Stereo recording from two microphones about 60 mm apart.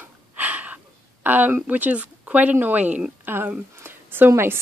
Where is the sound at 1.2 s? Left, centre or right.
Right.